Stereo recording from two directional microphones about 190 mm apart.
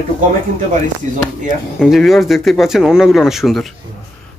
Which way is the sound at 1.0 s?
40° right (ahead or behind).